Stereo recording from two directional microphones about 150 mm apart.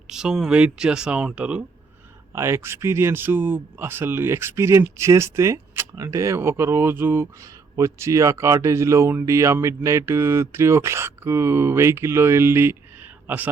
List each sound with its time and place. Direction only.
0.1 s speech: 5° right (ahead or behind)
2.3 s speech: 15° right (ahead or behind)